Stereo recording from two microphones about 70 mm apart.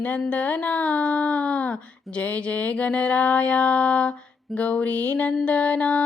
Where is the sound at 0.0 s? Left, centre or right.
Left.